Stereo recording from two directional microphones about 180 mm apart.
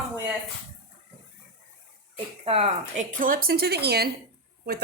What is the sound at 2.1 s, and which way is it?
Speech, 35° right (ahead or behind).